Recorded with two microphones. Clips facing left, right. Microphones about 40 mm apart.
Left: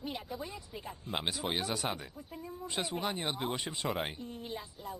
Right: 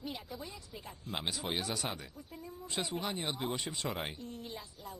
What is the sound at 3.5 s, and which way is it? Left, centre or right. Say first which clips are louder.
Speech: left 1 dB; centre.